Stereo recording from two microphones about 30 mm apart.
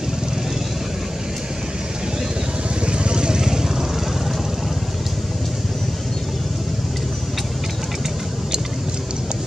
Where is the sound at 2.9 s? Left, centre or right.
Right.